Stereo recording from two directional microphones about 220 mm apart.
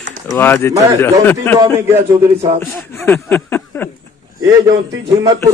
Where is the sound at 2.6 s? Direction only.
Centre (ahead or behind).